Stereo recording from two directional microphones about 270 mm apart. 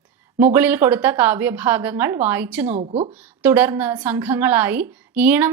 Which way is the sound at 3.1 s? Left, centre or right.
Centre.